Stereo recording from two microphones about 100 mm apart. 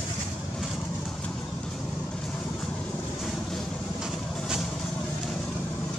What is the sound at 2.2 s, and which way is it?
Vehicle, 5° left (ahead or behind).